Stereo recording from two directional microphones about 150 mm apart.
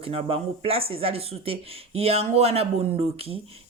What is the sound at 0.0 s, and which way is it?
A man's voice, 40° right (ahead or behind).